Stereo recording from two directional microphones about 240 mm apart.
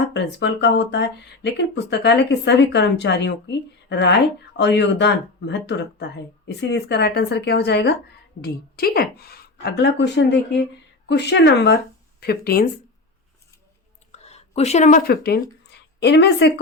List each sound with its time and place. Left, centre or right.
0.0 s a woman's voice: left
14.1 s speech: left